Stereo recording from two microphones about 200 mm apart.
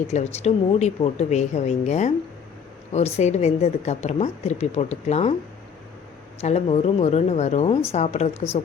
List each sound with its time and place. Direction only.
0.1 s a woman's voice: 35° left (ahead or behind)
6.4 s a woman's voice: 35° left (ahead or behind)